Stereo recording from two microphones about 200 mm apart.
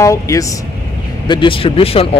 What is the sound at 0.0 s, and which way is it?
Speech, 15° left (ahead or behind).